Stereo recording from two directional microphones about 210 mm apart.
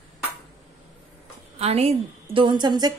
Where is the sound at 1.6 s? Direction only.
30° right (ahead or behind).